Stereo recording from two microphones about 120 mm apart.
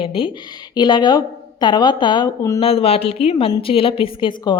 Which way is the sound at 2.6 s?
55° left (ahead or behind).